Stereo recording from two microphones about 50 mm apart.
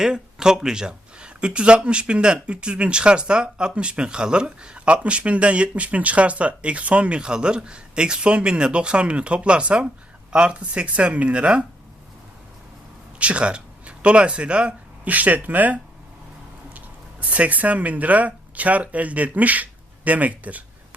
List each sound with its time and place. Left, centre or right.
0.0 s speech: centre
13.1 s speech: right